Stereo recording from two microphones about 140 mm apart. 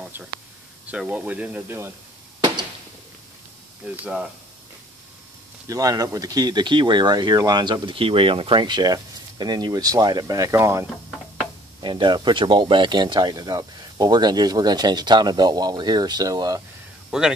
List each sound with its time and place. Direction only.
0.0 s a sound: 10° right (ahead or behind)
0.8 s speech: 10° right (ahead or behind)
3.8 s speech: 10° right (ahead or behind)
5.7 s speech: 25° right (ahead or behind)
11.8 s speech: 35° right (ahead or behind)
17.1 s speech: 5° right (ahead or behind)